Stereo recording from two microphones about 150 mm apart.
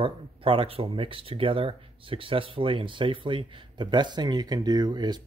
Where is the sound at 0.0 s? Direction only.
35° right (ahead or behind).